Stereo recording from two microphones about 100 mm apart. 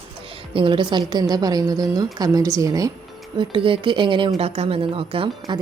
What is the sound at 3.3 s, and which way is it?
Speech, 60° right (ahead or behind).